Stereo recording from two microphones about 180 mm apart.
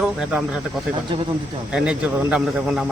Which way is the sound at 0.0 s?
5° right (ahead or behind).